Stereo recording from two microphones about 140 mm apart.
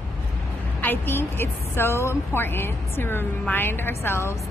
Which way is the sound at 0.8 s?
15° left (ahead or behind).